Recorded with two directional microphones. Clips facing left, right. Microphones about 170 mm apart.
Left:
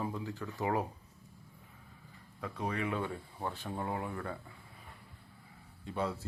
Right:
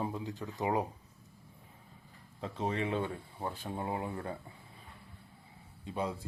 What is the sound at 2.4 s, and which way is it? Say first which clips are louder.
Speech: right 2 dB; 25° right (ahead or behind).